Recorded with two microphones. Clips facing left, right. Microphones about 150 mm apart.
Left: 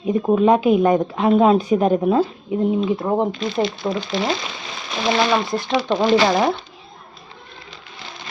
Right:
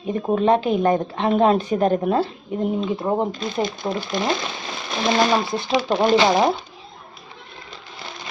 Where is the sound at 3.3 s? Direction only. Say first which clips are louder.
Left 3 dB; 45° right (ahead or behind).